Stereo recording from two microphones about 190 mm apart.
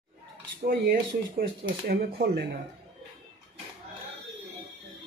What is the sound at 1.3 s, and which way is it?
A man's voice, 55° right (ahead or behind).